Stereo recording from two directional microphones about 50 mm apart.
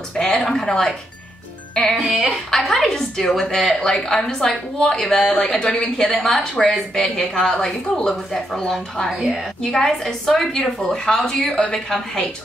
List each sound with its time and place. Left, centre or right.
0.2 s a sound: centre
1.9 s speech: centre
2.5 s speech: centre
9.6 s speech: centre